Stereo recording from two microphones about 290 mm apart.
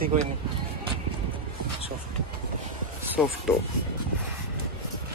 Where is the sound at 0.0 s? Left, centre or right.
Right.